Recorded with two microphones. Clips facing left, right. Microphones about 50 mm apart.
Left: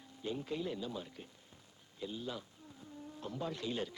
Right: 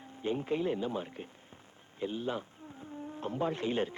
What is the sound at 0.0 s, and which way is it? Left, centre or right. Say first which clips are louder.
Speech: right 7 dB; right.